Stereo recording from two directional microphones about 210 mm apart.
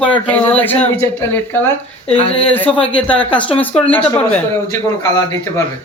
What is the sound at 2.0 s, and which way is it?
Speech, 30° left (ahead or behind).